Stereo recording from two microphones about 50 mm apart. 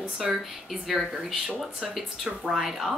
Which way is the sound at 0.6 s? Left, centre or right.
Centre.